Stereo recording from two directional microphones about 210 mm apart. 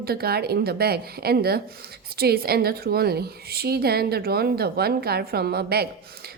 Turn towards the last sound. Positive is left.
turn(degrees=-50)  # may be behind; listen again after turning